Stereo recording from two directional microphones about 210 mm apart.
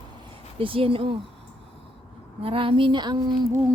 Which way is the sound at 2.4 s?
25° right (ahead or behind).